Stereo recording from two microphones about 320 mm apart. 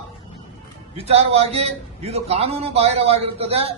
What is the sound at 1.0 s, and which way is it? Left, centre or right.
A man's voice, centre.